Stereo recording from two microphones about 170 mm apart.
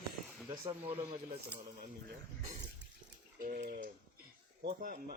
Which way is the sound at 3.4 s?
50° right (ahead or behind).